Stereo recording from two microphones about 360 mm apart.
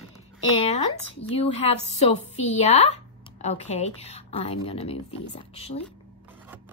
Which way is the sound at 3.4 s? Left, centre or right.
Centre.